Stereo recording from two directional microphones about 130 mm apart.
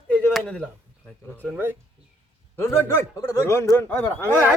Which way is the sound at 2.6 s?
20° left (ahead or behind).